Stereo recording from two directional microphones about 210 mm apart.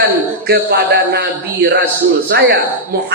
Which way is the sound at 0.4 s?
50° right (ahead or behind).